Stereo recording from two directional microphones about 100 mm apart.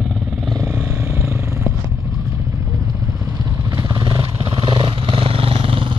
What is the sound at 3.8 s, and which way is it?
Vehicle, 40° right (ahead or behind).